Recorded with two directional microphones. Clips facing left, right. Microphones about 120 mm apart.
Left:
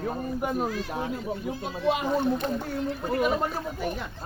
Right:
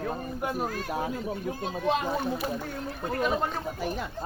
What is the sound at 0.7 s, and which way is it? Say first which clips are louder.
Speech: left 1 dB; 50° right (ahead or behind).